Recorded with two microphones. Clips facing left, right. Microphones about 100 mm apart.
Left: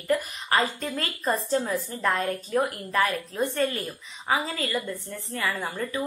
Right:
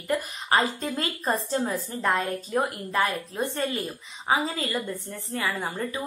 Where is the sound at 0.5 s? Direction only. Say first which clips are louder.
Right 1 dB; 25° right (ahead or behind).